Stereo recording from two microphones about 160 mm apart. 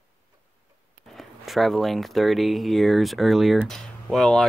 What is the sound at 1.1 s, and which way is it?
Speech, centre (ahead or behind).